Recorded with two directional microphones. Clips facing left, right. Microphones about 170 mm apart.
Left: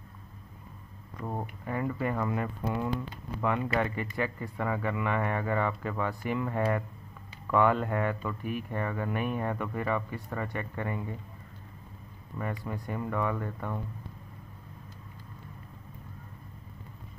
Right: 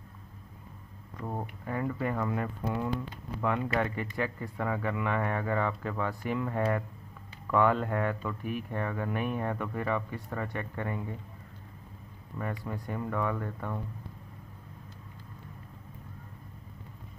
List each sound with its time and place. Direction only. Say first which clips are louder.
1.2 s speech: left 1 dB; 10° left (ahead or behind)
12.4 s speech: left 1 dB; 10° left (ahead or behind)